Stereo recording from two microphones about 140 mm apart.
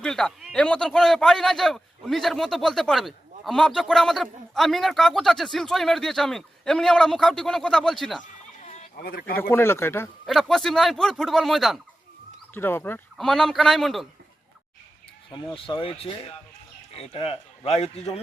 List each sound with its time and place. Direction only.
0.0 s a man's voice: 5° left (ahead or behind)
8.2 s a sound: 60° left (ahead or behind); by 9.4 s 90° left
9.4 s speech: 15° left (ahead or behind)
10.2 s a man's voice: centre (ahead or behind)
12.5 s speech: 15° left (ahead or behind)
13.1 s a man's voice: centre (ahead or behind)
15.3 s a man's voice: 35° left (ahead or behind); by 18.1 s 50° left (ahead or behind)